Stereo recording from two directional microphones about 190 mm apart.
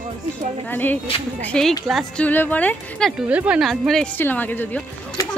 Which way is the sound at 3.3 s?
5° right (ahead or behind).